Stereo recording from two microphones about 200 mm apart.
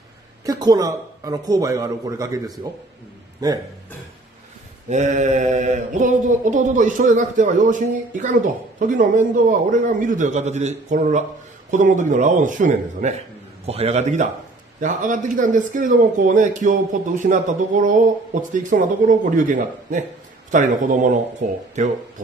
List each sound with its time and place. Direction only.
0.5 s speech: 20° right (ahead or behind)
4.8 s mantra: 35° right (ahead or behind)